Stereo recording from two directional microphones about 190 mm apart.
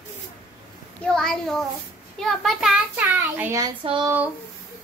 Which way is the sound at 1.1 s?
Centre (ahead or behind).